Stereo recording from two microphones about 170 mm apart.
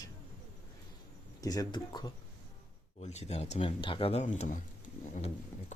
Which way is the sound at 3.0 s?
40° left (ahead or behind).